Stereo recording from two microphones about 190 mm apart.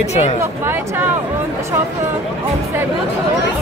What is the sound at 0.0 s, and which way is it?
Speech, 35° left (ahead or behind).